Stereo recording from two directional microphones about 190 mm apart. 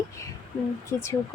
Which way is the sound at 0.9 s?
15° left (ahead or behind).